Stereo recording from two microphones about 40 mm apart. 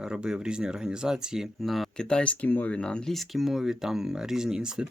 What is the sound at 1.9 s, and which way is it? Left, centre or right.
Speech, left.